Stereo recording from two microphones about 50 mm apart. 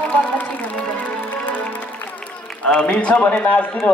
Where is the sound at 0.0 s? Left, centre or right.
Left.